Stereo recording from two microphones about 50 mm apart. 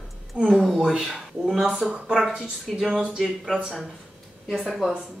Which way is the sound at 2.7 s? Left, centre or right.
Centre.